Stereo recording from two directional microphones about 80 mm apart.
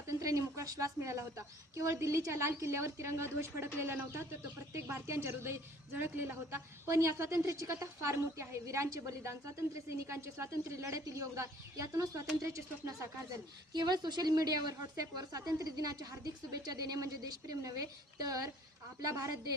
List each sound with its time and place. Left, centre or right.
0.1 s a woman's voice: right
4.7 s a woman's voice: right
13.7 s a woman's voice: right